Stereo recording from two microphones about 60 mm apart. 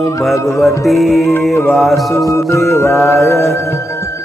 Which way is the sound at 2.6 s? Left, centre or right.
Left.